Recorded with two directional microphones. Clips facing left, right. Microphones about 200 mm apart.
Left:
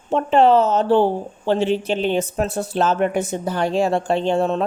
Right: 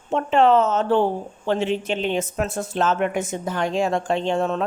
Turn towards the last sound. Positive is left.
turn(degrees=35)  # may be behind; listen again after turning